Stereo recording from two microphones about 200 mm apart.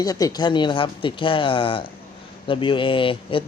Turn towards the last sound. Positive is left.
turn(degrees=25)  # may be behind; listen again after turning